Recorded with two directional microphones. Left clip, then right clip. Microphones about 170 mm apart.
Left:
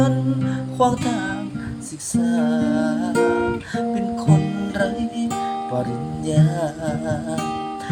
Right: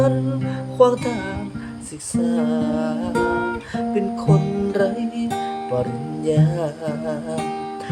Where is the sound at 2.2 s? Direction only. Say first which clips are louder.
Even; 10° right (ahead or behind).